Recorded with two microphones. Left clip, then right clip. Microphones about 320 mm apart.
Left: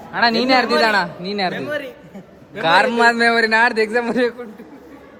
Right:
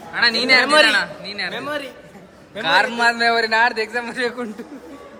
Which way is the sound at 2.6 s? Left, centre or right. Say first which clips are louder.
Left 3 dB; centre.